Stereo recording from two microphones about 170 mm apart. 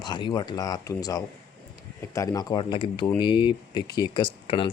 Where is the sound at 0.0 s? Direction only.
25° left (ahead or behind).